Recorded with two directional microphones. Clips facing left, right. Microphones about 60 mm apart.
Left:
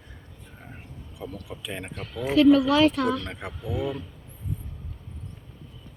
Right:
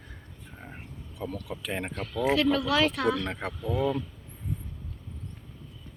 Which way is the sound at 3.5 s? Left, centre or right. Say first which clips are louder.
Right 1 dB; centre.